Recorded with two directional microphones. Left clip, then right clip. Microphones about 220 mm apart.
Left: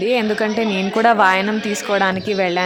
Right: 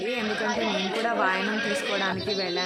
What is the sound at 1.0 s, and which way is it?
A woman's voice, 45° left (ahead or behind).